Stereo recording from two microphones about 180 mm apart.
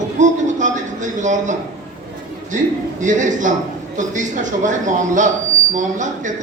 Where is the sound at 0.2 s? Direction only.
45° right (ahead or behind).